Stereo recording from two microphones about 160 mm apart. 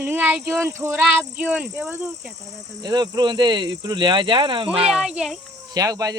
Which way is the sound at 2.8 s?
25° right (ahead or behind).